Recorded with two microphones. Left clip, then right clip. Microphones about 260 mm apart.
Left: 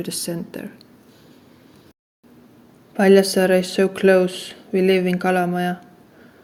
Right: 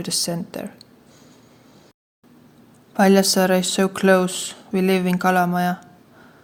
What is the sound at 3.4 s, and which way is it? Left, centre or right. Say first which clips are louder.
Speech: left 2 dB; right.